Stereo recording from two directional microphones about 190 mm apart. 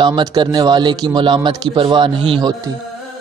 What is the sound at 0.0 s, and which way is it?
A man's voice, 20° right (ahead or behind).